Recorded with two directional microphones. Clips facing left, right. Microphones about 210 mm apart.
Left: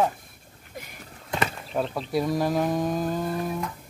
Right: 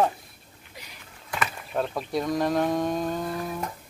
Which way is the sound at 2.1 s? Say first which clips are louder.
Left 1 dB; 5° left (ahead or behind).